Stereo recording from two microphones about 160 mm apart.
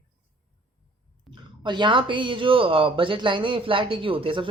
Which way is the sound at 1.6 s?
30° right (ahead or behind).